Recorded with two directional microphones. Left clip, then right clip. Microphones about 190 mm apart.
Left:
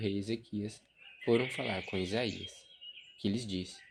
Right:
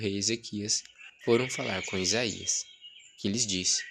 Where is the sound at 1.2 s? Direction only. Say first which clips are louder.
Right 4 dB; 25° right (ahead or behind).